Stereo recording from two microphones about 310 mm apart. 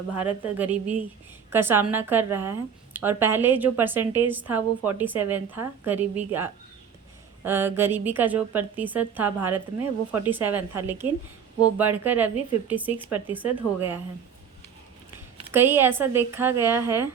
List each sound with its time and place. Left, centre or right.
0.2 s a woman's voice: centre
15.5 s a woman's voice: centre